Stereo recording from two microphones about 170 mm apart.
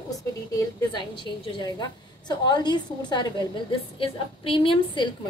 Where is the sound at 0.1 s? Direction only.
20° left (ahead or behind).